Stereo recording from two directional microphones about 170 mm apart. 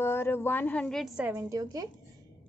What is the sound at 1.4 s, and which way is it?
Speech, 20° right (ahead or behind).